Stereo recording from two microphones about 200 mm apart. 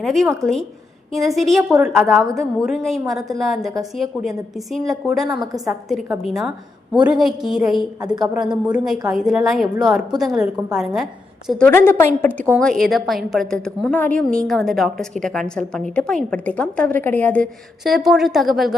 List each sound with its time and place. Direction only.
0.0 s a woman's voice: centre (ahead or behind)
5.3 s a woman's voice: 20° right (ahead or behind)
5.9 s a woman's voice: centre (ahead or behind)
8.0 s a woman's voice: 20° right (ahead or behind)
8.3 s a woman's voice: 5° right (ahead or behind)